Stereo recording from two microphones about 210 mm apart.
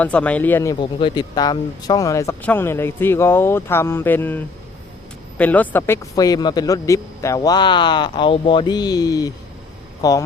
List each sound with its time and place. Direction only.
0.0 s a man's voice: 5° left (ahead or behind)